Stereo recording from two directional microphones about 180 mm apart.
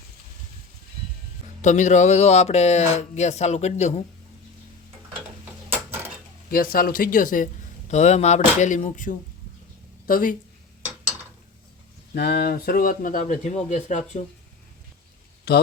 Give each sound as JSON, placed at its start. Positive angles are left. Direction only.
{"t": 1.6, "sound": "speech", "side_deg": 40}
{"t": 5.6, "sound": "a sound", "side_deg": -15}
{"t": 6.5, "sound": "speech", "side_deg": 55}
{"t": 12.1, "sound": "speech", "side_deg": 65}
{"t": 15.5, "sound": "speech", "side_deg": 60}